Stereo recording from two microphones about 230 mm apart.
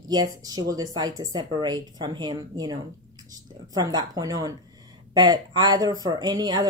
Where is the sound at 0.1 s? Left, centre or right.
Centre.